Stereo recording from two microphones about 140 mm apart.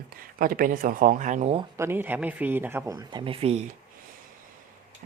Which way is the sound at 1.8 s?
15° right (ahead or behind).